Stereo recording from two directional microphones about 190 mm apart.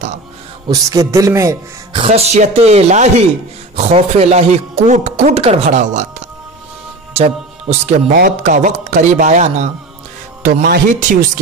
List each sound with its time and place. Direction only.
0.7 s a man's voice: 15° right (ahead or behind)
2.0 s a man's voice: 35° right (ahead or behind); by 11.0 s 50° right (ahead or behind)